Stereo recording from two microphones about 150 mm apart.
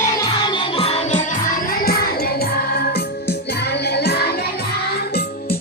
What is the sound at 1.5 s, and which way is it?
Music, 75° left (ahead or behind).